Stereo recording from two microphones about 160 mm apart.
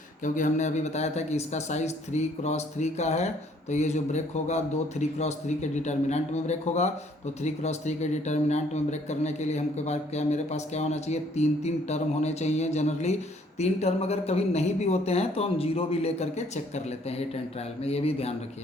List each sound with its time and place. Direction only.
0.3 s speech: 50° left (ahead or behind)